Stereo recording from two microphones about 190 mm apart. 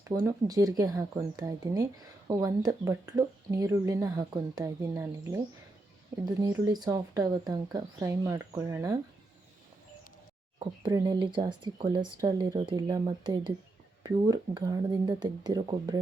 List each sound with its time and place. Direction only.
0.1 s speech: 20° right (ahead or behind)
10.6 s speech: 25° right (ahead or behind)